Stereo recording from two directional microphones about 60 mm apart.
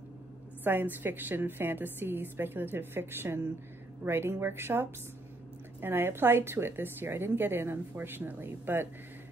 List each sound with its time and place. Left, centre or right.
0.7 s a woman's voice: right